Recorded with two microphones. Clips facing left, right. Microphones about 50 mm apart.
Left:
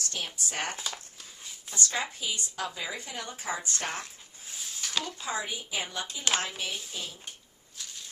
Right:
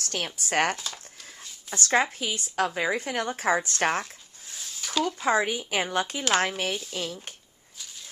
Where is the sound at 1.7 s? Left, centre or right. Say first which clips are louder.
Right 8 dB; right.